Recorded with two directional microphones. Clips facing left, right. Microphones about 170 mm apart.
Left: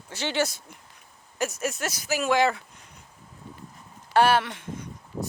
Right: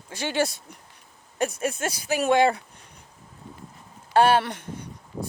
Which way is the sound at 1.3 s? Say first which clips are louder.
Right 3 dB; 30° right (ahead or behind).